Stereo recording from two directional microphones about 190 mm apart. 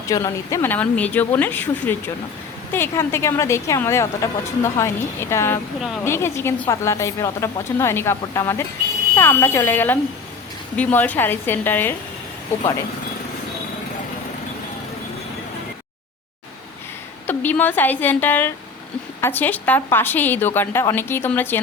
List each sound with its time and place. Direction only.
0.1 s a woman's voice: 15° left (ahead or behind)
17.2 s a woman's voice: 10° left (ahead or behind)